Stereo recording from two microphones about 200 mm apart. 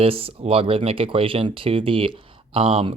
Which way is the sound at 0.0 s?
30° right (ahead or behind).